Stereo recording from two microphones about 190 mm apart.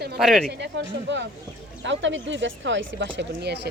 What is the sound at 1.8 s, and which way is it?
Speech, 75° right (ahead or behind).